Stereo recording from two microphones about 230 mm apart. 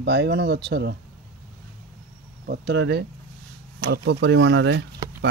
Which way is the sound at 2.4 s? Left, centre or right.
Right.